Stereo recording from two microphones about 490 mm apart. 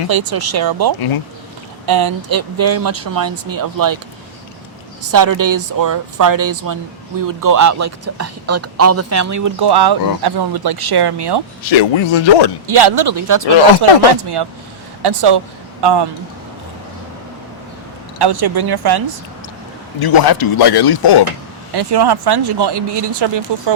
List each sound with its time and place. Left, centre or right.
0.1 s speech: right
5.1 s speech: right
9.6 s speech: right
11.7 s speech: left
12.6 s speech: right
13.8 s speech: right
15.0 s a man's voice: right
18.2 s speech: right
20.0 s speech: left
21.8 s speech: right